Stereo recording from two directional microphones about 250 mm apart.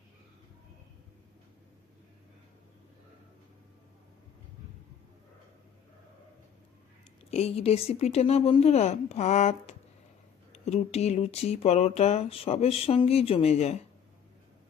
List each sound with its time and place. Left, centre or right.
7.3 s speech: left